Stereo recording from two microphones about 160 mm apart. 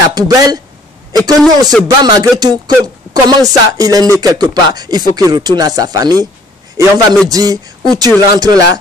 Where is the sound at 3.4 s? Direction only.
20° right (ahead or behind).